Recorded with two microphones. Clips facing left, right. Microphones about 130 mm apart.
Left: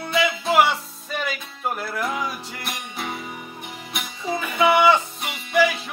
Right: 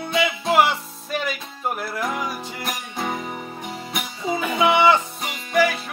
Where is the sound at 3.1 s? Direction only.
45° right (ahead or behind).